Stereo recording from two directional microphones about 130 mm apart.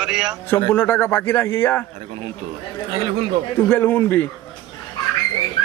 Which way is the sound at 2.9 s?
45° right (ahead or behind).